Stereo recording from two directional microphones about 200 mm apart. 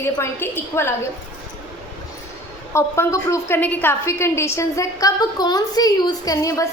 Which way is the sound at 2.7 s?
15° left (ahead or behind).